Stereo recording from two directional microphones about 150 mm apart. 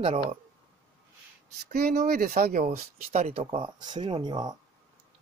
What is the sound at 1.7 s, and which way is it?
Speech, 75° right (ahead or behind).